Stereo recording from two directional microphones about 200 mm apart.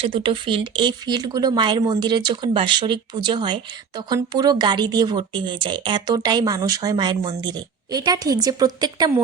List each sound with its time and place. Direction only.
0.0 s speech: 25° right (ahead or behind)